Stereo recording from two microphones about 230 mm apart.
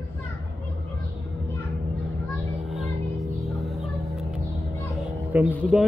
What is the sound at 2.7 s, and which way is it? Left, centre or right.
Music, centre.